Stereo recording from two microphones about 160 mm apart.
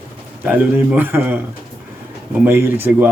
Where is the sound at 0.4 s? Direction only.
10° right (ahead or behind).